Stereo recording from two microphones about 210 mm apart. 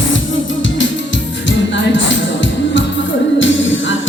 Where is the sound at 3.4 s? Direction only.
65° left (ahead or behind).